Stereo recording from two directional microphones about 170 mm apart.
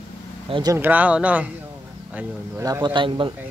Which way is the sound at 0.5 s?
25° right (ahead or behind).